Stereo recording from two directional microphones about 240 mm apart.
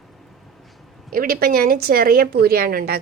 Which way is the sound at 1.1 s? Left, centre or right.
Right.